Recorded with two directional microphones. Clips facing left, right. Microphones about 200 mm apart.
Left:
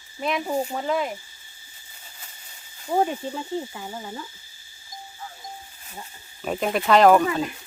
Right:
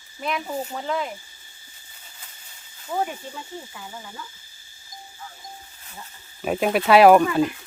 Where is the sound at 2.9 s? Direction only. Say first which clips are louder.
Left 5 dB; 45° left (ahead or behind).